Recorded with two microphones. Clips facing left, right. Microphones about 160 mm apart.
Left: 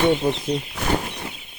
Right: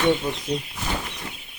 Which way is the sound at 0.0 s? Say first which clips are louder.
Left 3 dB; 30° left (ahead or behind).